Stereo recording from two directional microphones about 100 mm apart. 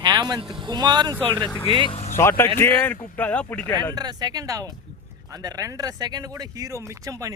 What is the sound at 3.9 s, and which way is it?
Speech, 40° right (ahead or behind).